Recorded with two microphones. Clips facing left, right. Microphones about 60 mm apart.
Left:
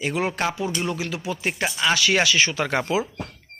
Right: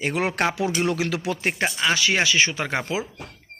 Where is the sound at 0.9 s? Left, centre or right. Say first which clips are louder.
Right 3 dB; right.